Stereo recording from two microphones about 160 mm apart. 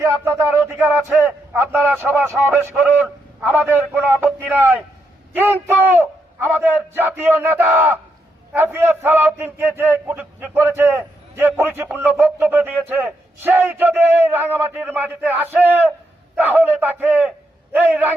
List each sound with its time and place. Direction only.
0.0 s a man's voice: 20° right (ahead or behind)